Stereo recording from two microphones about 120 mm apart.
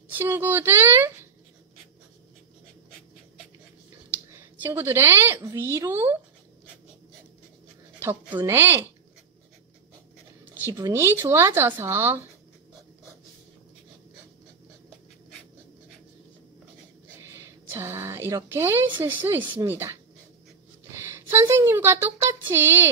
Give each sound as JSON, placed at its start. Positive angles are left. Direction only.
{"t": 0.2, "sound": "speech", "side_deg": -15}
{"t": 4.6, "sound": "speech", "side_deg": -20}
{"t": 8.0, "sound": "a woman's voice", "side_deg": -20}
{"t": 10.4, "sound": "writing", "side_deg": -15}
{"t": 10.7, "sound": "speech", "side_deg": -25}
{"t": 17.7, "sound": "speech", "side_deg": -20}
{"t": 21.3, "sound": "speech", "side_deg": -20}